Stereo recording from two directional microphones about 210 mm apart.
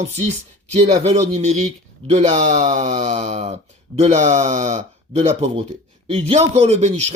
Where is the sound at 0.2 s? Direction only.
30° right (ahead or behind).